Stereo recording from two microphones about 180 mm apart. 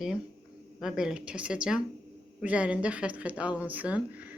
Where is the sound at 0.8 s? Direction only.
5° right (ahead or behind).